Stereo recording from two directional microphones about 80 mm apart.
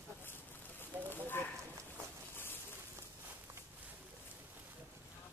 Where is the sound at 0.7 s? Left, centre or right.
Left.